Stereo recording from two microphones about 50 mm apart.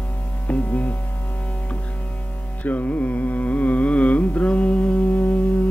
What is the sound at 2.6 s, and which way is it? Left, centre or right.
Carnatic music, left.